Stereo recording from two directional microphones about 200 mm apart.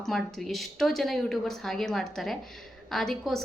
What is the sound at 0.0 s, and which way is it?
A woman's voice, centre (ahead or behind).